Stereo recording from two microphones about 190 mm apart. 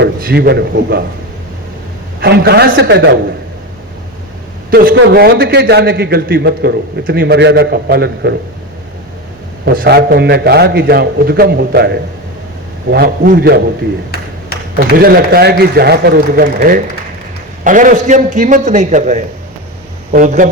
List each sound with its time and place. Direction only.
0.0 s a man's voice: 55° right (ahead or behind)
2.2 s a man's voice: 55° right (ahead or behind)
4.7 s a man's voice: 55° right (ahead or behind)
9.6 s a man's voice: 55° right (ahead or behind)
14.9 s a man's voice: 55° right (ahead or behind)